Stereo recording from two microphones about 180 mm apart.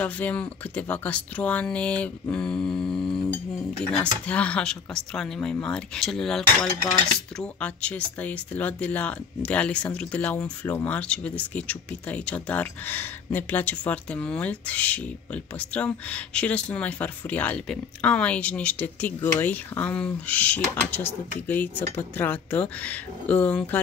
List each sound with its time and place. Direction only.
0.0 s speech: 10° left (ahead or behind)
3.0 s a sound: 30° left (ahead or behind)
4.0 s speech: 5° left (ahead or behind)